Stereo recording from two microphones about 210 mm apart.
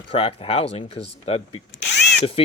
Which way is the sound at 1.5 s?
60° left (ahead or behind).